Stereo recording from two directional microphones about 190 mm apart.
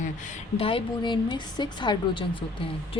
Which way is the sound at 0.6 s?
30° left (ahead or behind).